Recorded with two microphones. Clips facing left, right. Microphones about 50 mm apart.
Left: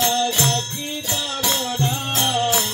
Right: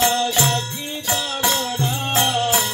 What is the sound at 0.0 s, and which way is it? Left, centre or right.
Jingle bell, centre.